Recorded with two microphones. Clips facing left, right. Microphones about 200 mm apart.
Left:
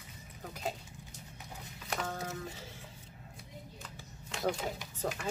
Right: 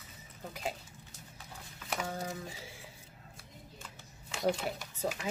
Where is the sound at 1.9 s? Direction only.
10° right (ahead or behind).